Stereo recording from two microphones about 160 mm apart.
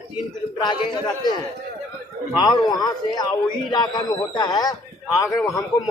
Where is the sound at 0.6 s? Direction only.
25° left (ahead or behind).